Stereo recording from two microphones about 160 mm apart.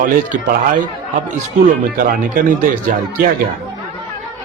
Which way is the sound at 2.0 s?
60° right (ahead or behind).